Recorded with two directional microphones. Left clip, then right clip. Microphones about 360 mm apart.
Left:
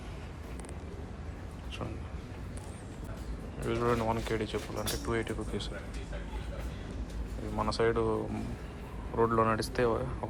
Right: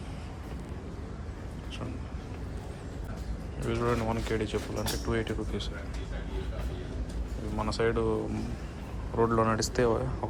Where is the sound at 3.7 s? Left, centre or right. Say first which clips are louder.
Even; centre.